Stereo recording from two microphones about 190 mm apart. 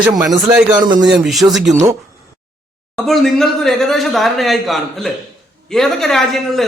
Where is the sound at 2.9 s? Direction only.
Centre (ahead or behind).